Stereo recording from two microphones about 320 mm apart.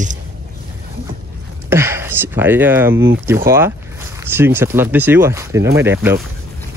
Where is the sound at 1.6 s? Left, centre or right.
Centre.